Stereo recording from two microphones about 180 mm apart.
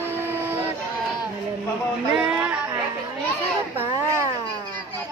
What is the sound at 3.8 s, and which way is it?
Speech, 15° right (ahead or behind).